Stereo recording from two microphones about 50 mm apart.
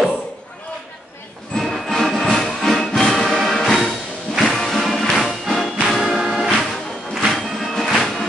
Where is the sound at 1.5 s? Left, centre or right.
Centre.